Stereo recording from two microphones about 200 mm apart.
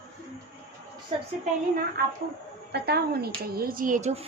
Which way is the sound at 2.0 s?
50° right (ahead or behind).